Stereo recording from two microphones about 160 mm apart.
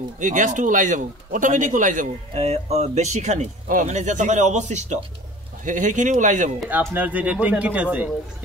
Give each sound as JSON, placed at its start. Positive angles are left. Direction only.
{"t": 0.2, "sound": "speech", "side_deg": -55}
{"t": 6.7, "sound": "speech", "side_deg": -10}